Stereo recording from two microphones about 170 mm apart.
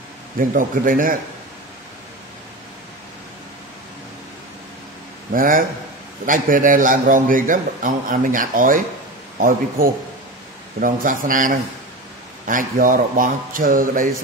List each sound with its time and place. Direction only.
0.4 s a man's voice: 55° right (ahead or behind)
5.3 s a man's voice: 55° right (ahead or behind)